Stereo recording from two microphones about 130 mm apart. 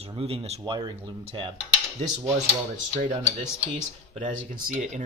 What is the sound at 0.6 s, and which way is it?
Speech, 35° right (ahead or behind).